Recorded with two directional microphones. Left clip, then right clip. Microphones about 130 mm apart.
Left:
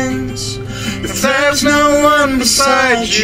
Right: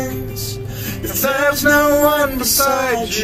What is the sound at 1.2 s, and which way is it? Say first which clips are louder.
Music: left 3 dB; 15° right (ahead or behind).